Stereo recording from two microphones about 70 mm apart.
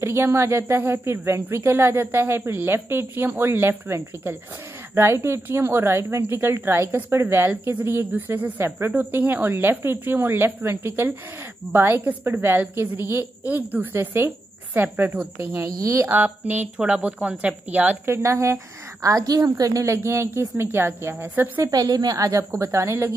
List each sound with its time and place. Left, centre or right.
0.0 s a woman's voice: right
15.6 s a woman's voice: right
16.1 s a woman's voice: right
18.0 s a woman's voice: right
20.1 s a woman's voice: right
21.6 s a woman's voice: right
22.4 s a woman's voice: right
22.7 s a woman's voice: right